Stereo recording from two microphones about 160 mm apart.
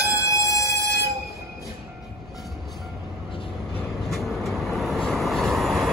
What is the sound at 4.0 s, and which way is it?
Vehicle, centre (ahead or behind).